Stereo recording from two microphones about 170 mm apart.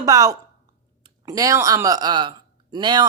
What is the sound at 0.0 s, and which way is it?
A man's voice, 20° right (ahead or behind).